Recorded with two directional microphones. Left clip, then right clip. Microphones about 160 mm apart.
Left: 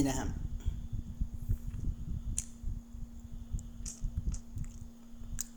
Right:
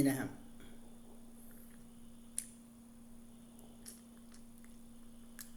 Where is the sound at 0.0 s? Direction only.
20° left (ahead or behind).